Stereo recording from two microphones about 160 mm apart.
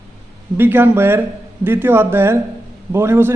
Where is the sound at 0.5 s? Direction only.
10° right (ahead or behind).